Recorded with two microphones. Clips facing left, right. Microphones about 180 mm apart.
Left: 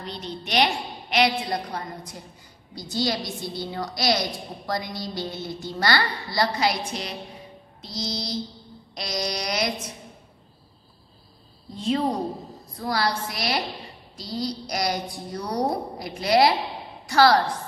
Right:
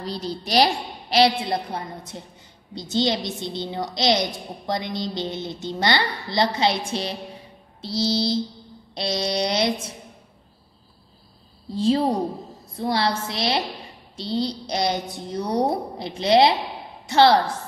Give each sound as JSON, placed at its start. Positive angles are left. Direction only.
{"t": 0.0, "sound": "a woman's voice", "side_deg": -35}
{"t": 11.7, "sound": "a woman's voice", "side_deg": -30}